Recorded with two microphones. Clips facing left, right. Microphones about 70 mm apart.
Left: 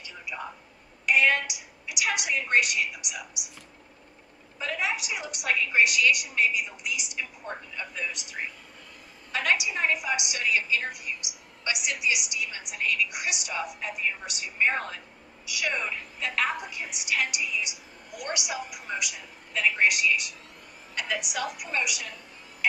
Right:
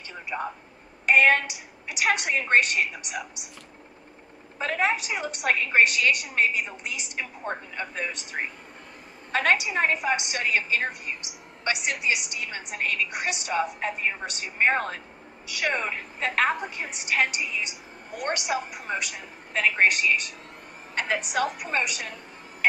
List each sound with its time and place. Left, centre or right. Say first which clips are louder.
0.3 s a woman's voice: right 6 dB; right
4.6 s a woman's voice: right 5 dB; right